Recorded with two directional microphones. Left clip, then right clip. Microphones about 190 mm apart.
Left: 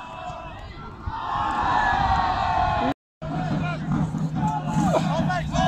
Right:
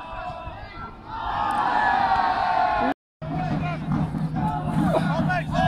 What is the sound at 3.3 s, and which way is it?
Vehicle, 45° left (ahead or behind).